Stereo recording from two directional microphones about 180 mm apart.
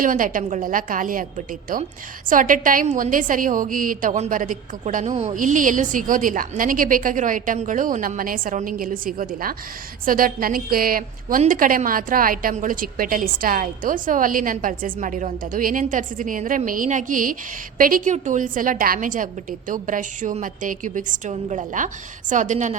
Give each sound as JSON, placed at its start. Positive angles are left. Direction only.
{"t": 0.0, "sound": "a woman's voice", "side_deg": -50}